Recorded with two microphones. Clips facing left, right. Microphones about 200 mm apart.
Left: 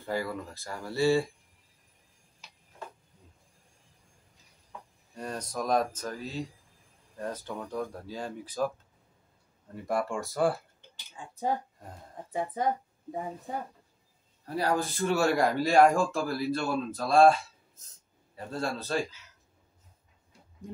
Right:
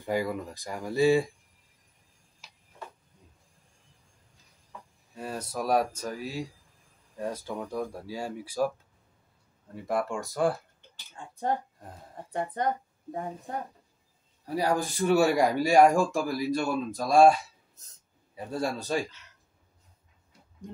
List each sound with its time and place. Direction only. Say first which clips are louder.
0.0 s speech: right 3 dB; 15° right (ahead or behind)
5.1 s speech: right 1 dB; 5° right (ahead or behind)
9.8 s speech: right 1 dB; centre (ahead or behind)
14.4 s speech: right 1 dB; 10° right (ahead or behind)